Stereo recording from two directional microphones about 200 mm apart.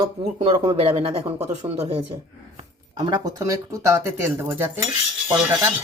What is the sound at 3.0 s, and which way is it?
Speech, 20° right (ahead or behind).